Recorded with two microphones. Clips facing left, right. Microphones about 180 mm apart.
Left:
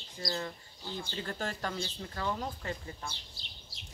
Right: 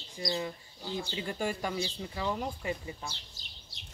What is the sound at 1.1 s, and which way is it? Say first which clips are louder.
Speech: right 3 dB; 15° right (ahead or behind).